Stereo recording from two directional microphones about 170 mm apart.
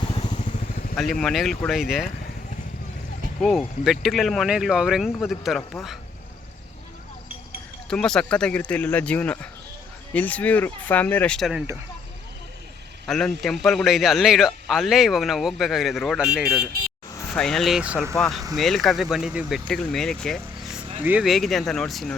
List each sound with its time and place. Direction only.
0.2 s vehicle: 45° left (ahead or behind)
0.9 s a man's voice: 5° left (ahead or behind)
3.8 s a man's voice: centre (ahead or behind)
7.9 s speech: 5° left (ahead or behind)
13.1 s a man's voice: 5° left (ahead or behind)
21.0 s a man's voice: 10° right (ahead or behind)